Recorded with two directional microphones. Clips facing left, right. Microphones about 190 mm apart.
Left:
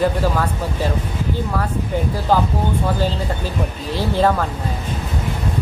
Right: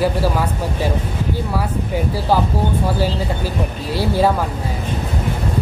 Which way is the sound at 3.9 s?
10° right (ahead or behind).